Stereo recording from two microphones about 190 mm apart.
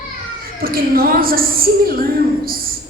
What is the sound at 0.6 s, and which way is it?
A woman's voice, 50° right (ahead or behind).